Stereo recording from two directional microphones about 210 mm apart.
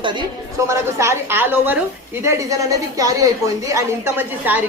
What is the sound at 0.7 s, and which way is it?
A woman's voice, 15° right (ahead or behind).